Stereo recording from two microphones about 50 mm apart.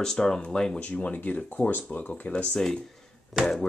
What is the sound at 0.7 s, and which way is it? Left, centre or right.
Speech, left.